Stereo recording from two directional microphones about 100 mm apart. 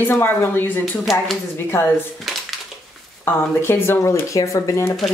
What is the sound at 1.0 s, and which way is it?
Speech, centre (ahead or behind).